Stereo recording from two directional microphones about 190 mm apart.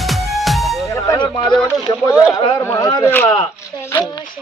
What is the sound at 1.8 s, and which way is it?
Speech, 15° left (ahead or behind).